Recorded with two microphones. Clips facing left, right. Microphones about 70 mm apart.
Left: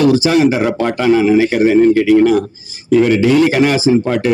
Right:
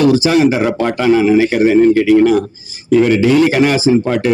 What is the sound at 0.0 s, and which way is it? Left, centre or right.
Speech, right.